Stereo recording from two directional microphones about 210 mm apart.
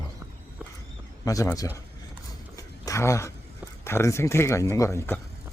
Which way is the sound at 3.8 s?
15° left (ahead or behind).